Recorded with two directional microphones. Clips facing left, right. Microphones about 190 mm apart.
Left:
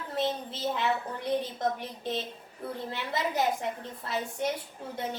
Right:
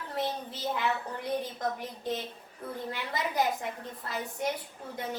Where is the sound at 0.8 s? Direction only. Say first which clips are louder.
Left 2 dB; 25° left (ahead or behind).